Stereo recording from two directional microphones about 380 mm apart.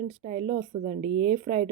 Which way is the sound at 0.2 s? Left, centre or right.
Centre.